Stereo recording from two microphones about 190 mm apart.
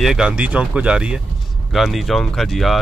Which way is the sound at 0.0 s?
5° right (ahead or behind).